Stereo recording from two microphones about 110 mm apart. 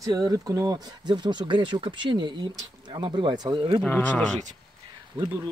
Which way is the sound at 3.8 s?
15° left (ahead or behind).